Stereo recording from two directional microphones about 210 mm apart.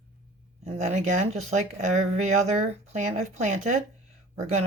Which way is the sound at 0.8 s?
30° right (ahead or behind).